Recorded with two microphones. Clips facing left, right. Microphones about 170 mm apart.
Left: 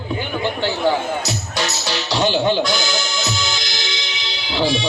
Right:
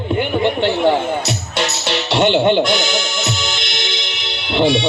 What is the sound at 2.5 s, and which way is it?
Music, 20° right (ahead or behind).